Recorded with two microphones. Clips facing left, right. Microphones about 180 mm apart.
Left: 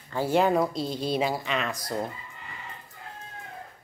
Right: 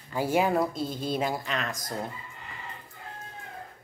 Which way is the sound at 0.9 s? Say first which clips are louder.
Left 2 dB; 50° right (ahead or behind).